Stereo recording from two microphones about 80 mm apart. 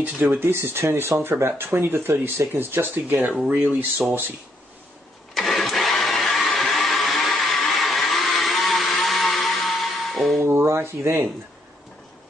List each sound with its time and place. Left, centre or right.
0.0 s speech: right
5.3 s engine starting: centre
10.4 s a sound: right